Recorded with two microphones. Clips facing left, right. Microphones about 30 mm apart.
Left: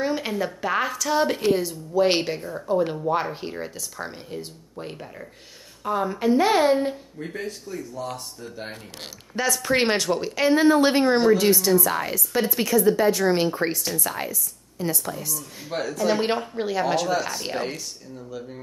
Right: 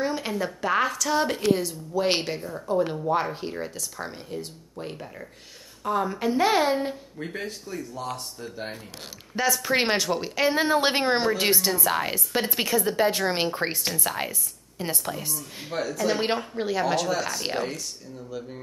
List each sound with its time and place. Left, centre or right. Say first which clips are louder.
0.0 s speech: left 2 dB; centre
7.7 s speech: left 1 dB; right
9.3 s a woman's voice: left 1 dB; centre; by 15.4 s right
15.7 s speech: left 1 dB; left
16.2 s speech: left 2 dB; centre